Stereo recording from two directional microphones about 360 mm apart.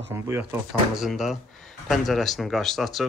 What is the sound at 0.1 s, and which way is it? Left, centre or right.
Speech, centre.